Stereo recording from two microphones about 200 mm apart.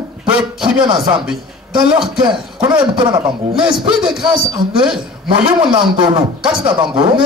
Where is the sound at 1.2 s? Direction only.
5° right (ahead or behind).